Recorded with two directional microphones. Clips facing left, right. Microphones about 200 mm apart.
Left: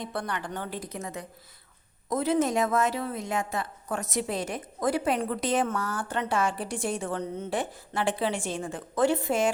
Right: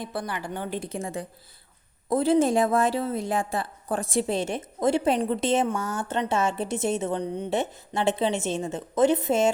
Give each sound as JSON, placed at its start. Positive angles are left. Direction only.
{"t": 0.0, "sound": "a woman's voice", "side_deg": -5}
{"t": 0.8, "sound": "a woman's voice", "side_deg": -30}